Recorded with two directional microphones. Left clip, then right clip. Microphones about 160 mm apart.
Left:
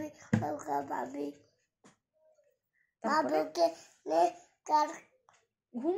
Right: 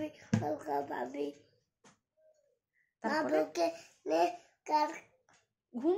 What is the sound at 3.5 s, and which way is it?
A child's voice, 5° right (ahead or behind).